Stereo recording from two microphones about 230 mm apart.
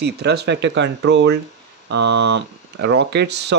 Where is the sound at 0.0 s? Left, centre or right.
Right.